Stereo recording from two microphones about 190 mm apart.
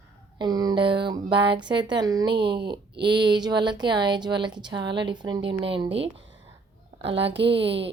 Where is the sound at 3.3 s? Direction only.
20° right (ahead or behind).